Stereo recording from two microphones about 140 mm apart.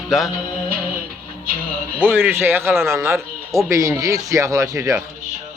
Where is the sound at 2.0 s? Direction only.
15° right (ahead or behind).